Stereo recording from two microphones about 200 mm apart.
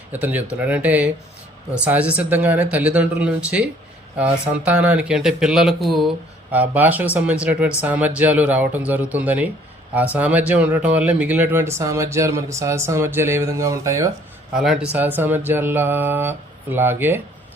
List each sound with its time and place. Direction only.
0.1 s speech: 10° right (ahead or behind)
14.5 s speech: 5° right (ahead or behind)